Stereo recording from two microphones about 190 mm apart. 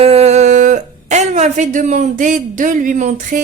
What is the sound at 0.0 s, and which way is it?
A woman's voice, 30° right (ahead or behind).